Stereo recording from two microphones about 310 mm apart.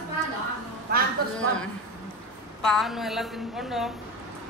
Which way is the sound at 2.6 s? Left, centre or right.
Centre.